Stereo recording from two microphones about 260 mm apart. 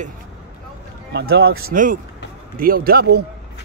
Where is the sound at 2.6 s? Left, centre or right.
Right.